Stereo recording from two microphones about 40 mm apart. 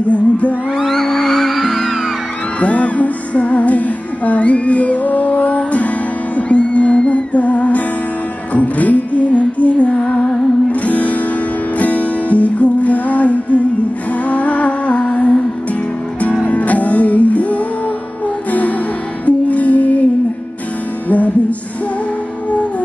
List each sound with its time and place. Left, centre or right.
0.1 s music: left
0.8 s music: centre
2.6 s music: left
16.4 s music: left
21.1 s music: left